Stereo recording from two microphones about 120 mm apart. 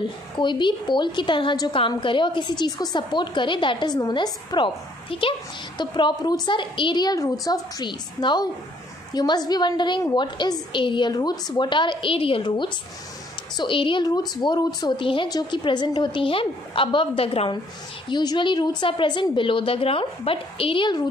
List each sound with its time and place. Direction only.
0.4 s a woman's voice: 40° left (ahead or behind)
5.1 s a woman's voice: 50° left (ahead or behind)
18.0 s a woman's voice: 40° left (ahead or behind)